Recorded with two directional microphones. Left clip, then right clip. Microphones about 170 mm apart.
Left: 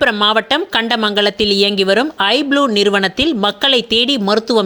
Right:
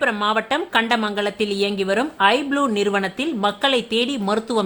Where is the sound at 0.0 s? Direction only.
35° left (ahead or behind).